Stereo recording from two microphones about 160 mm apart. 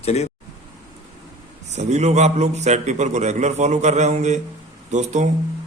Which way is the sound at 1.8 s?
45° right (ahead or behind).